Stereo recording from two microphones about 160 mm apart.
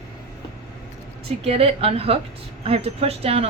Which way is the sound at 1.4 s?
35° right (ahead or behind).